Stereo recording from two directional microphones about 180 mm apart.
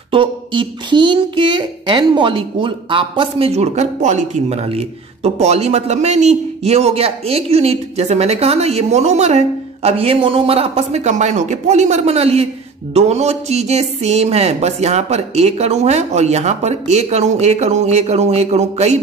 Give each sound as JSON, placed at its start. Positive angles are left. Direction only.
{"t": 0.1, "sound": "speech", "side_deg": -30}